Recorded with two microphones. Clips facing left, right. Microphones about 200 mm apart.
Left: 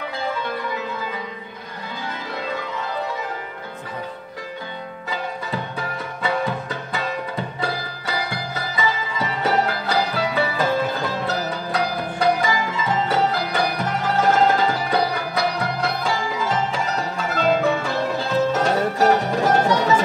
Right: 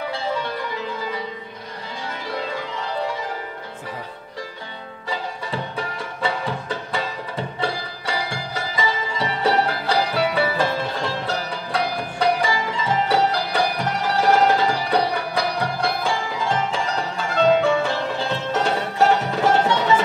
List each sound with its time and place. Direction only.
5.1 s music: 30° right (ahead or behind)